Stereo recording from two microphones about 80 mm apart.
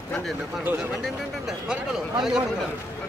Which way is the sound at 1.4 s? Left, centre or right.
Centre.